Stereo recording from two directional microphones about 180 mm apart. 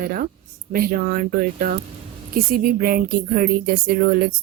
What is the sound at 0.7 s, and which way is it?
A woman's voice, 50° right (ahead or behind).